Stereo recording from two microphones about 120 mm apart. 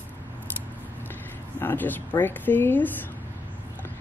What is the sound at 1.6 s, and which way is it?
Speech, 15° left (ahead or behind).